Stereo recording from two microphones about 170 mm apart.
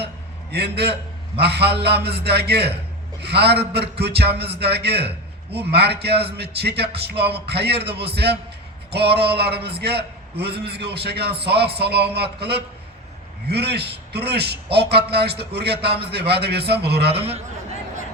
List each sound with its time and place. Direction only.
0.5 s a man's voice: 75° right (ahead or behind)
17.2 s a man's voice: 35° right (ahead or behind)